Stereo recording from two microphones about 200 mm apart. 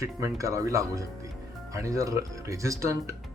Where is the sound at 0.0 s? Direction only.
15° right (ahead or behind).